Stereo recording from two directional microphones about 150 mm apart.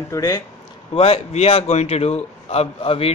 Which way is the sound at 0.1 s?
20° left (ahead or behind).